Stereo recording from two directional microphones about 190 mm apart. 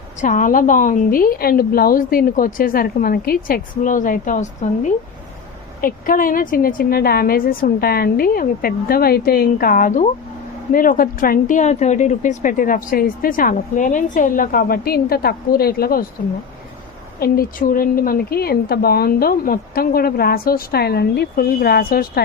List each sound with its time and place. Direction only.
0.2 s a woman's voice: 45° left (ahead or behind)
17.2 s a woman's voice: 50° left (ahead or behind)